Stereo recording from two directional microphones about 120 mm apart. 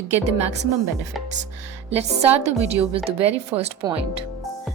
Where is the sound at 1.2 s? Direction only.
Centre (ahead or behind).